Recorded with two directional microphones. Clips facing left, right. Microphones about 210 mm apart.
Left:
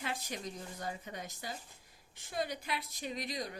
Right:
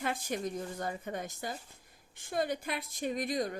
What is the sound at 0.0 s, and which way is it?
A woman's voice, 50° right (ahead or behind).